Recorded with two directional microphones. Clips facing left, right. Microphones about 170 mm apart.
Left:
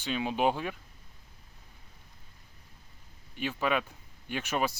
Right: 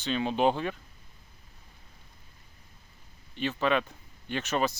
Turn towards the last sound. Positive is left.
turn(degrees=10)  # may be behind; listen again after turning